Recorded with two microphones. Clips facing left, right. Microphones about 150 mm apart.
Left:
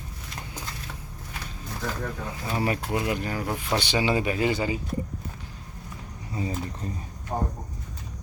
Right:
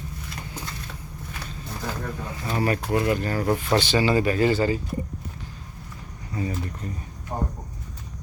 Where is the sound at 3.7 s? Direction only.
15° left (ahead or behind).